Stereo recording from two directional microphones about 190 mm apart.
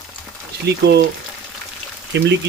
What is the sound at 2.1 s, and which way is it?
Speech, 65° right (ahead or behind).